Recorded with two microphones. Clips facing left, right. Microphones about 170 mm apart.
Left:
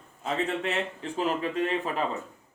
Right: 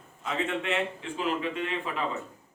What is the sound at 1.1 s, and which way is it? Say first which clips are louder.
Speech: left 3 dB; 40° left (ahead or behind).